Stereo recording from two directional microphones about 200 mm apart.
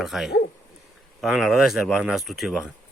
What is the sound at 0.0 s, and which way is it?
Speech, centre (ahead or behind).